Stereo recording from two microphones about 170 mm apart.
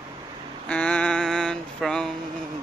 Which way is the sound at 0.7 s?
5° left (ahead or behind).